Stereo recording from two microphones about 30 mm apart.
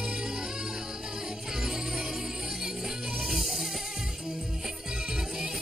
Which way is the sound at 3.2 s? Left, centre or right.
Centre.